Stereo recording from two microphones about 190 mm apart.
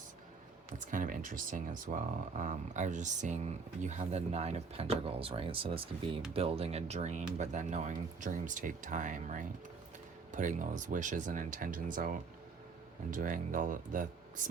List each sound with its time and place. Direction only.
0.9 s speech: 45° right (ahead or behind)